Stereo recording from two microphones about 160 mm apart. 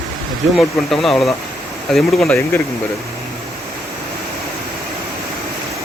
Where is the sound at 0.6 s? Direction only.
Centre (ahead or behind).